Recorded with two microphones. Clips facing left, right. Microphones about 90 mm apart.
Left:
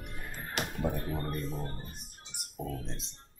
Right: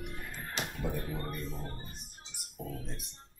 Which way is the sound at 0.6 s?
55° left (ahead or behind).